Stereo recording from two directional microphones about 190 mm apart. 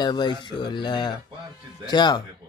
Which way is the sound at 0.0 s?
20° left (ahead or behind).